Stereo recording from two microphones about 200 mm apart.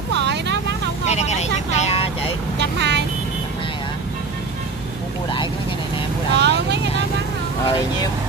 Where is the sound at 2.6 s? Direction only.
60° right (ahead or behind).